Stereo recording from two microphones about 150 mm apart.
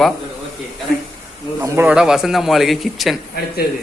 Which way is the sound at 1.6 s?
20° right (ahead or behind).